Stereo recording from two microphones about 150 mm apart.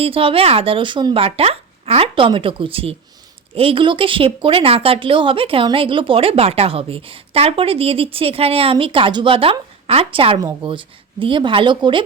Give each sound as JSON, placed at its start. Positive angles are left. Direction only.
{"t": 0.0, "sound": "speech", "side_deg": -40}